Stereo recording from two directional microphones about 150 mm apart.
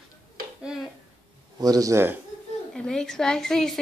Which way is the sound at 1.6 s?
25° right (ahead or behind).